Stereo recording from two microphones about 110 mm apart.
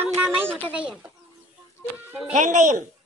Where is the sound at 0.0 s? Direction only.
20° right (ahead or behind).